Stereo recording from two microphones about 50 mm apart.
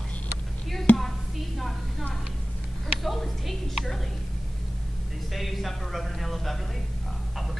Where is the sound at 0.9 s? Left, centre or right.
Left.